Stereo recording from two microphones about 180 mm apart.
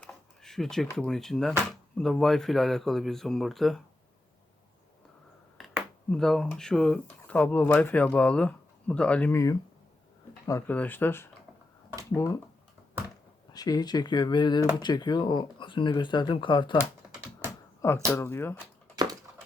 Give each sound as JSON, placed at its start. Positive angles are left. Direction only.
{"t": 0.0, "sound": "speech", "side_deg": 0}
{"t": 6.1, "sound": "speech", "side_deg": 5}
{"t": 13.5, "sound": "speech", "side_deg": 20}
{"t": 18.0, "sound": "speech", "side_deg": 10}